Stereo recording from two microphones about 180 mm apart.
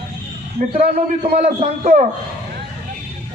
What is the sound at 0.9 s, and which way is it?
A man's voice, 30° right (ahead or behind).